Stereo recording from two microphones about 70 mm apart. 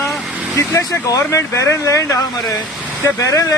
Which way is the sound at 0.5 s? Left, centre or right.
Left.